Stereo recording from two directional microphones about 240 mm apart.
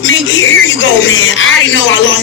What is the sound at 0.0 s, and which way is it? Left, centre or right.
Speech, left.